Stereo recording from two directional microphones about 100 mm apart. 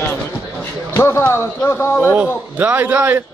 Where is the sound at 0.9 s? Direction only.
25° left (ahead or behind).